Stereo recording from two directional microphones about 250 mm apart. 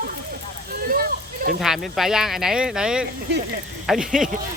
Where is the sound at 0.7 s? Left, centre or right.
Right.